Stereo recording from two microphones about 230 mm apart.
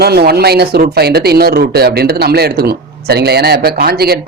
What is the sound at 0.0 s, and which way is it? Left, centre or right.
Speech, right.